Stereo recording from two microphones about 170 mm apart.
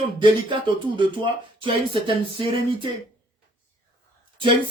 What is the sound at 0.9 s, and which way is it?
Speech, 30° right (ahead or behind).